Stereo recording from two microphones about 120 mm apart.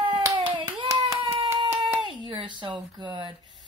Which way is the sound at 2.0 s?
40° right (ahead or behind).